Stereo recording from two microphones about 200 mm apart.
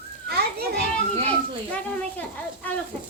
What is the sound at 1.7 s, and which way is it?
Speech, 10° left (ahead or behind).